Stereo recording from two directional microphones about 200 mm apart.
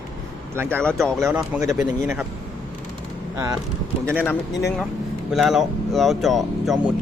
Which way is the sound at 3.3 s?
15° right (ahead or behind).